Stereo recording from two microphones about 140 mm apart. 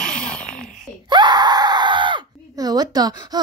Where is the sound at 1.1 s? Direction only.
30° right (ahead or behind).